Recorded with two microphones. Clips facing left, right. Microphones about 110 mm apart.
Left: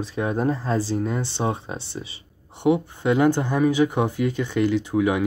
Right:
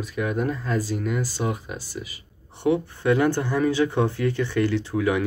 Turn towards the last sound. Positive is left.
turn(degrees=20)  # may be behind; listen again after turning